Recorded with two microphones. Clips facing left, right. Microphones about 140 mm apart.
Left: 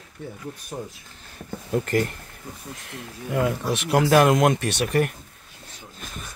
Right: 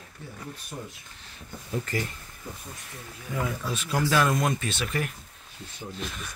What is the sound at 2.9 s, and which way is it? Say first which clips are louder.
Speech: left 8 dB; 75° left (ahead or behind).